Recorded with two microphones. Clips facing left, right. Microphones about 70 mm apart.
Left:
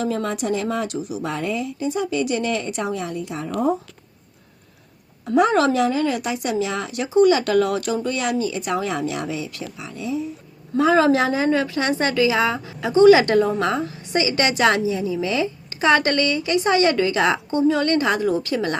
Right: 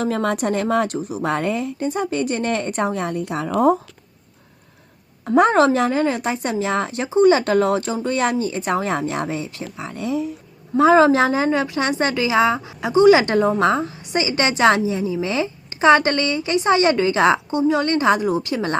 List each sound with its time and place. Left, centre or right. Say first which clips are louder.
0.0 s a woman's voice: right 3 dB; right
5.2 s a woman's voice: right 3 dB; right
9.9 s speech: right 3 dB; right
10.8 s a woman's voice: right 3 dB; right